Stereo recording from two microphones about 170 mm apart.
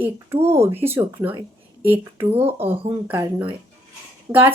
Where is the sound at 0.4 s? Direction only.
15° right (ahead or behind).